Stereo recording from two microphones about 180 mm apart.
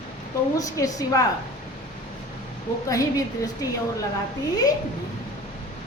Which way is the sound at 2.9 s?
20° left (ahead or behind).